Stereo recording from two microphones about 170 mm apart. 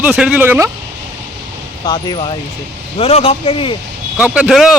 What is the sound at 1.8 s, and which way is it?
Speech, 25° left (ahead or behind).